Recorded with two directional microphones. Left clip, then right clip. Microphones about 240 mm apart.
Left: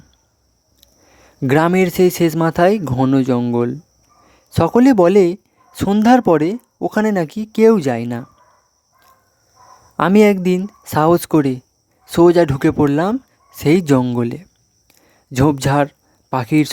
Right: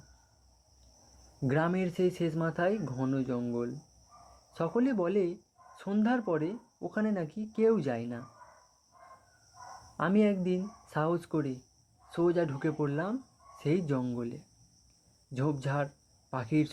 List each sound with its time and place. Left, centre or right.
1.4 s speech: left
10.0 s speech: left
14.8 s a sound: left
16.3 s speech: left